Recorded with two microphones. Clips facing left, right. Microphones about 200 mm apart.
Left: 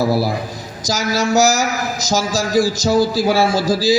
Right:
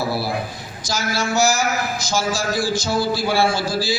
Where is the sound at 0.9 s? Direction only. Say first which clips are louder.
Left 5 dB; 40° left (ahead or behind).